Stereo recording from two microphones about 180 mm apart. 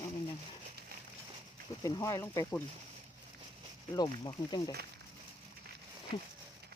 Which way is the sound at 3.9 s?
20° left (ahead or behind).